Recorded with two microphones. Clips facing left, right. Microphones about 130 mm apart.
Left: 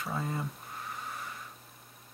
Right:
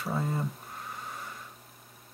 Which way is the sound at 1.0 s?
Centre (ahead or behind).